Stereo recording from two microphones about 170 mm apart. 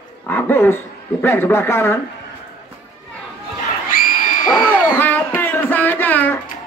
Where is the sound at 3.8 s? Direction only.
55° left (ahead or behind).